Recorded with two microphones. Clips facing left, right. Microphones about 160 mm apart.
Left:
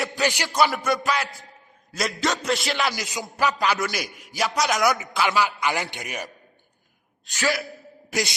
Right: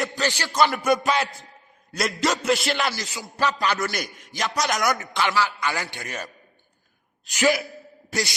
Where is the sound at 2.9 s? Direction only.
15° left (ahead or behind).